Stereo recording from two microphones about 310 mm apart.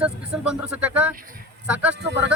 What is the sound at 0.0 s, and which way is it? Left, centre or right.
Speech, centre.